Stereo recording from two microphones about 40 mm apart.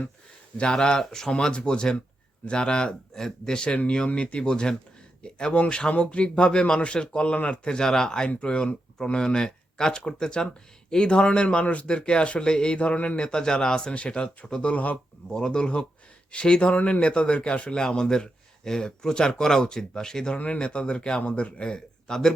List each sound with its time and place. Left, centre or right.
0.5 s speech: left
1.3 s speech: left
7.8 s speech: centre; by 11.9 s left
11.9 s speech: left
13.2 s speech: centre
14.6 s speech: left
15.3 s speech: centre
17.7 s speech: centre
21.2 s speech: left
21.6 s speech: left